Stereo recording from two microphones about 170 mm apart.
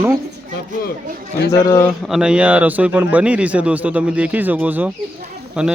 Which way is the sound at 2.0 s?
5° right (ahead or behind).